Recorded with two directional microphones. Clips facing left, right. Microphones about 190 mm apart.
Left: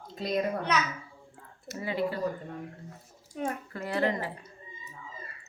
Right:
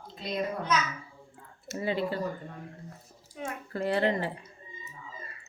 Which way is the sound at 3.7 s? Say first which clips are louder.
Right 4 dB; 30° right (ahead or behind).